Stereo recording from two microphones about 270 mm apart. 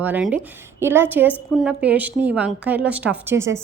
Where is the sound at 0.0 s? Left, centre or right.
Centre.